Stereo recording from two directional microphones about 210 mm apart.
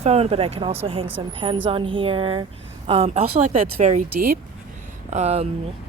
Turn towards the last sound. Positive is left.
turn(degrees=-30)  # may be behind; listen again after turning